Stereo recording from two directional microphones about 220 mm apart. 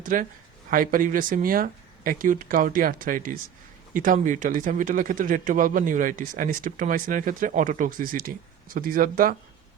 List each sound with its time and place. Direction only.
0.0 s speech: 40° right (ahead or behind)